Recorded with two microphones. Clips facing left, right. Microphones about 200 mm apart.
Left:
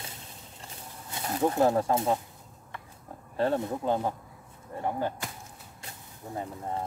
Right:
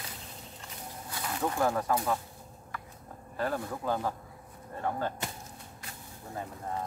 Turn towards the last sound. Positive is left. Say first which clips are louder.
# left 3 dB
turn(degrees=20)  # may be behind; listen again after turning